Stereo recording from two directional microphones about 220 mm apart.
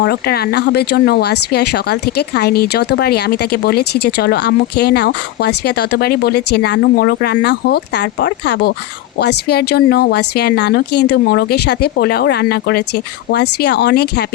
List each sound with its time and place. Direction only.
0.0 s speech: 45° left (ahead or behind)